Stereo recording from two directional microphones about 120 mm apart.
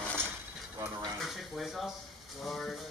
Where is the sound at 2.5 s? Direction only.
5° left (ahead or behind).